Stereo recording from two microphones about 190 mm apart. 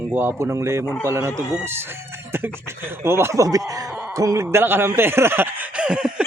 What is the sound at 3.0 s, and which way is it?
Speech, 15° right (ahead or behind).